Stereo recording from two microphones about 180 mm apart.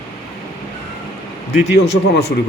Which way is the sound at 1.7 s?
65° left (ahead or behind).